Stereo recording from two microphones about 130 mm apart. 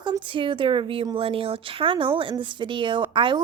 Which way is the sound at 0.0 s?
40° right (ahead or behind).